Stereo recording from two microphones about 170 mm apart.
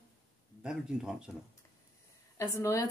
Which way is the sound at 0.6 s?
5° right (ahead or behind).